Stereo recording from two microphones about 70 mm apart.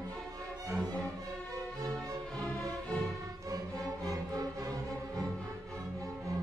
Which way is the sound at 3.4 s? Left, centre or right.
Right.